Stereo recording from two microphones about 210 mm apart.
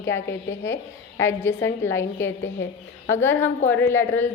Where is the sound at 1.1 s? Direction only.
10° left (ahead or behind).